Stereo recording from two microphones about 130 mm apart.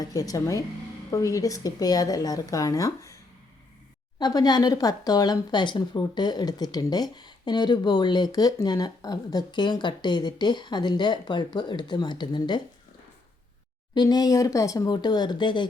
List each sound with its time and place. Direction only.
0.0 s speech: 25° left (ahead or behind)
4.2 s speech: 30° left (ahead or behind)
13.9 s speech: 35° left (ahead or behind)